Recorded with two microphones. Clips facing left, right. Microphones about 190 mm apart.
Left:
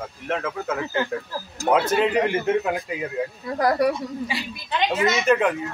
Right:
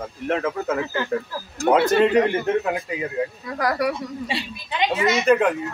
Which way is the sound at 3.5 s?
25° left (ahead or behind).